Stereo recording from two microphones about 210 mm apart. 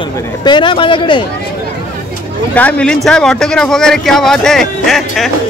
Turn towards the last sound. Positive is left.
turn(degrees=0)  # may be behind; listen again after turning